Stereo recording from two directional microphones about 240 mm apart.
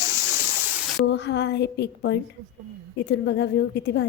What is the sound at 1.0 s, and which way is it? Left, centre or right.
A woman's voice, left.